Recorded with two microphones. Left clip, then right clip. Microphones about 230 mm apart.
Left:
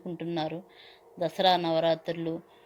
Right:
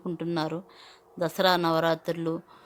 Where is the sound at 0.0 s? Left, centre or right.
Centre.